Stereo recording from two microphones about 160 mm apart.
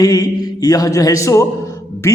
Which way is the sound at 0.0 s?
25° left (ahead or behind).